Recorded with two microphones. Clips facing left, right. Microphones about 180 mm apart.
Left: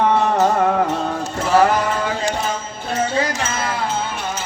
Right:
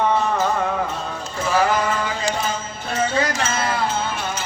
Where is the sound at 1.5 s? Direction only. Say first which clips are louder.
Left 4 dB; 55° left (ahead or behind).